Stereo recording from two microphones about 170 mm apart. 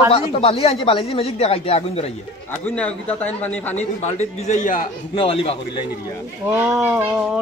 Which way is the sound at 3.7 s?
40° left (ahead or behind).